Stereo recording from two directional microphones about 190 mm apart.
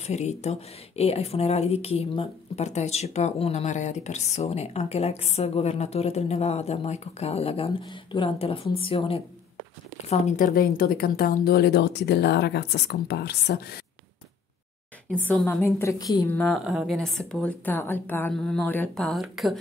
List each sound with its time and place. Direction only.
0.0 s a woman's voice: 35° left (ahead or behind)
10.0 s a woman's voice: 40° left (ahead or behind); by 13.7 s 60° left (ahead or behind)
15.0 s a woman's voice: 5° left (ahead or behind)
16.3 s speech: 5° left (ahead or behind)